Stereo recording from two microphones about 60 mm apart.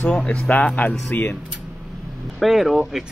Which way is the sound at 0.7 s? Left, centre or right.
Left.